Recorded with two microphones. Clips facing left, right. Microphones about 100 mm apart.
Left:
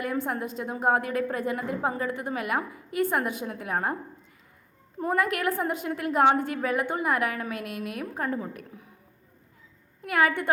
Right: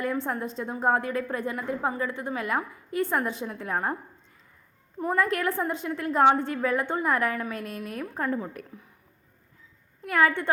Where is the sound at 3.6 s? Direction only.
15° left (ahead or behind).